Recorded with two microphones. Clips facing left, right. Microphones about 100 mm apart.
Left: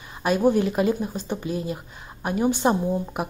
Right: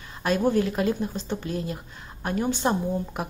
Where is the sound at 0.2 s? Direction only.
10° left (ahead or behind).